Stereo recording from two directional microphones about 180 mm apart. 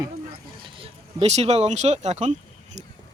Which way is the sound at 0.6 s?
30° right (ahead or behind).